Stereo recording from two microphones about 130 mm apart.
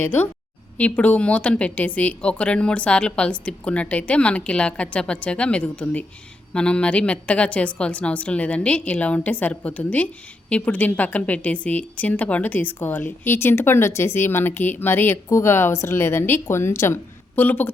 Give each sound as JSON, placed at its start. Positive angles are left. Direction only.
{"t": 0.0, "sound": "a woman's voice", "side_deg": 15}